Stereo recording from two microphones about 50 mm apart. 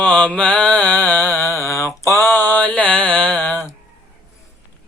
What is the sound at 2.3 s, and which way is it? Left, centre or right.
Mantra, left.